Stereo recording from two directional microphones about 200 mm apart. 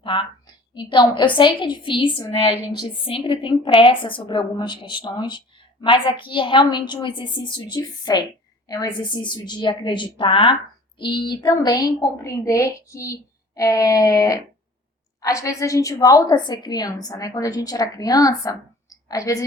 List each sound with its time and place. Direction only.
0.0 s a woman's voice: 25° left (ahead or behind)